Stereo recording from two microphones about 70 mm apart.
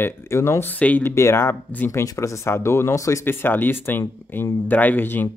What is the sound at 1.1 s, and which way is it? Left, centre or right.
Speech, left.